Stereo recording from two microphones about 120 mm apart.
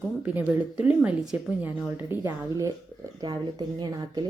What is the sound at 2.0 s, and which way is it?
Speech, 20° right (ahead or behind).